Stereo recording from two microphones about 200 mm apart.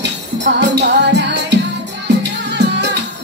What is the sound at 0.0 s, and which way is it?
Music, 60° right (ahead or behind).